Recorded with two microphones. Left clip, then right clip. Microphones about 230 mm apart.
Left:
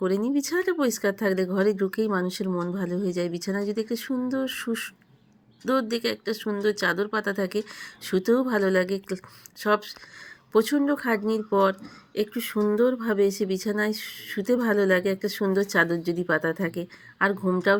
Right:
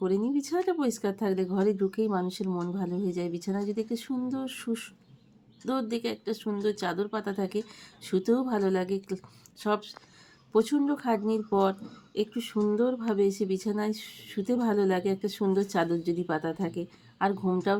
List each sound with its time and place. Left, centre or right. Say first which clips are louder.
0.0 s speech: left 3 dB; centre
2.4 s speech: left 4 dB; centre
2.7 s speech: left 4 dB; centre